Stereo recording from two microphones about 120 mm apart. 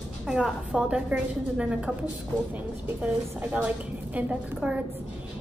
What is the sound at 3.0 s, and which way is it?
A woman's voice, 15° right (ahead or behind).